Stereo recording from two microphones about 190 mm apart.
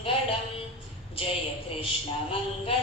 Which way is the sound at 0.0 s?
30° left (ahead or behind).